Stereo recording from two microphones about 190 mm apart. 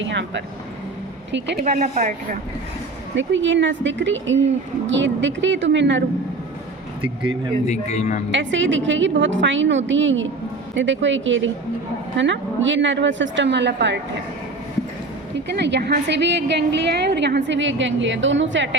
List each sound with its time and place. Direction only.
0.0 s a woman's voice: 70° right (ahead or behind)
1.5 s a woman's voice: 35° right (ahead or behind)
3.2 s a woman's voice: 75° right (ahead or behind)
7.7 s speech: 35° left (ahead or behind)
8.3 s a woman's voice: 75° right (ahead or behind)
15.5 s a woman's voice: 65° right (ahead or behind)